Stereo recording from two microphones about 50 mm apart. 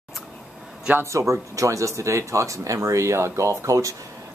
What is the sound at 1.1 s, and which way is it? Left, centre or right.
Speech, right.